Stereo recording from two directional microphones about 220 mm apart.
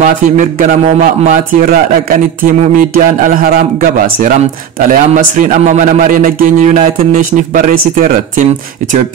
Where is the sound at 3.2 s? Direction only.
40° right (ahead or behind).